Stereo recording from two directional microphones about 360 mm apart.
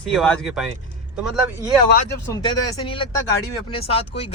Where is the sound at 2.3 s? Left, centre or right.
Centre.